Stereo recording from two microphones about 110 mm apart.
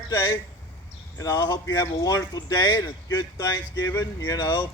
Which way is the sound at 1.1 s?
35° left (ahead or behind).